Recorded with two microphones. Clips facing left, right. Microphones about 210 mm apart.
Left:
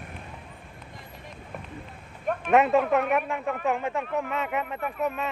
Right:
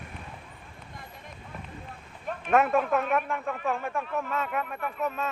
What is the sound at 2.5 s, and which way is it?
Speech, 20° left (ahead or behind).